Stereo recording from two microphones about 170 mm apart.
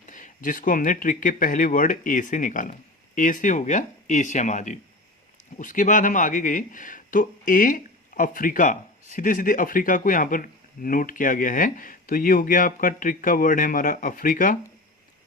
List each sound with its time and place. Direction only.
0.0 s speech: 50° left (ahead or behind)